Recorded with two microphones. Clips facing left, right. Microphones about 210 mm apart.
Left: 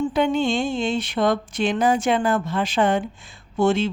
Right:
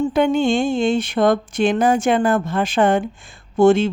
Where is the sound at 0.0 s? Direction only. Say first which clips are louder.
Right 4 dB; 50° right (ahead or behind).